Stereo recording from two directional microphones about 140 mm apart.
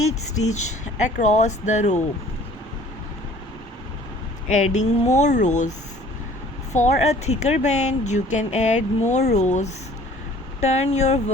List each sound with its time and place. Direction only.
1.0 s speech: 55° left (ahead or behind)
4.4 s speech: 60° left (ahead or behind)
6.7 s speech: 55° left (ahead or behind)